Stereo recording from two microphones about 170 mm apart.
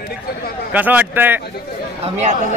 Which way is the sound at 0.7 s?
10° right (ahead or behind).